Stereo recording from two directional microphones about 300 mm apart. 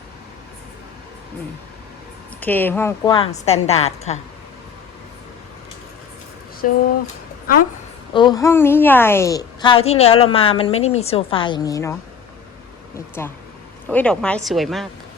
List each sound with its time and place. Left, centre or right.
2.4 s a woman's voice: centre
6.6 s speech: left
8.1 s a woman's voice: centre
13.2 s a woman's voice: centre